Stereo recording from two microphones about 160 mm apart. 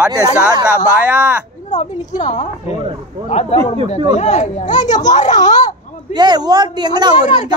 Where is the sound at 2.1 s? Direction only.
50° left (ahead or behind).